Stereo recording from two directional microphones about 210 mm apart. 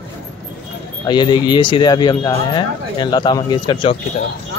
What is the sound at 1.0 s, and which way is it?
Speech, 20° left (ahead or behind).